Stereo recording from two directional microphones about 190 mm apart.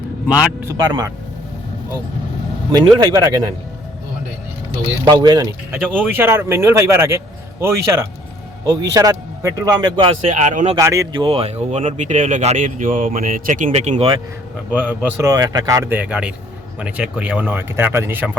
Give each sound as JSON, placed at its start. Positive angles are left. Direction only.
{"t": 0.7, "sound": "a man's voice", "side_deg": -20}
{"t": 3.0, "sound": "a man's voice", "side_deg": -20}
{"t": 5.0, "sound": "a man's voice", "side_deg": -25}
{"t": 10.2, "sound": "speech", "side_deg": -40}
{"t": 10.8, "sound": "speech", "side_deg": -15}
{"t": 14.7, "sound": "speech", "side_deg": -10}